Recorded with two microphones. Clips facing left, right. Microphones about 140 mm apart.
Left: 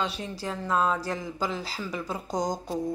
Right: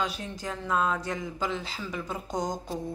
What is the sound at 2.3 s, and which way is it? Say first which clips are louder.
Speech: left 3 dB; 35° left (ahead or behind).